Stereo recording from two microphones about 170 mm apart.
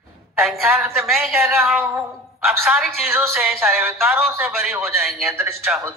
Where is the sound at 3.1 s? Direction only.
15° right (ahead or behind).